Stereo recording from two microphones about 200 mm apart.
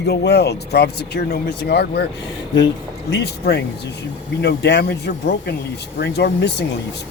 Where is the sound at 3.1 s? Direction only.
55° left (ahead or behind).